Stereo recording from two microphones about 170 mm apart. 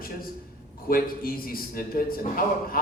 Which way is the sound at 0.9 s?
60° left (ahead or behind).